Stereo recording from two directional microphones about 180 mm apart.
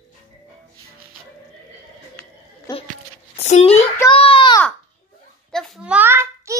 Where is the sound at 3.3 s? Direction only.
35° left (ahead or behind).